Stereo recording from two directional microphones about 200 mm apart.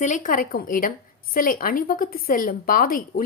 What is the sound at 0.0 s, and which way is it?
Speech, 40° left (ahead or behind).